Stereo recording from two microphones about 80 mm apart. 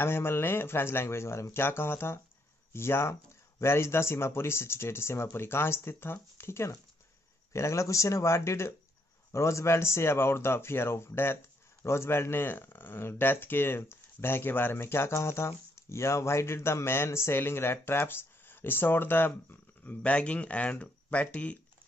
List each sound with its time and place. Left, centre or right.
0.0 s speech: left